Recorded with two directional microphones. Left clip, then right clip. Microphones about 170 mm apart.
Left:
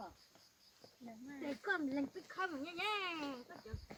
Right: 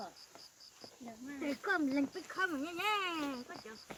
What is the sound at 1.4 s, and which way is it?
Speech, 20° right (ahead or behind).